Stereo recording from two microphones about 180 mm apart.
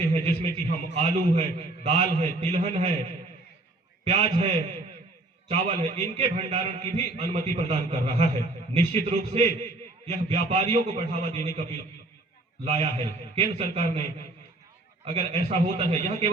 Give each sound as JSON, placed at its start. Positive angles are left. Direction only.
{"t": 0.0, "sound": "a man's voice", "side_deg": -35}
{"t": 4.1, "sound": "a man's voice", "side_deg": -35}
{"t": 12.6, "sound": "a man's voice", "side_deg": -35}